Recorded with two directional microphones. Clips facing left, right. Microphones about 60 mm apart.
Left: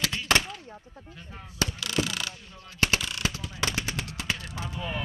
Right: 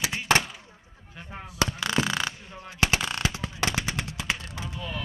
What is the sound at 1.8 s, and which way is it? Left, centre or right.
Mechanisms, right.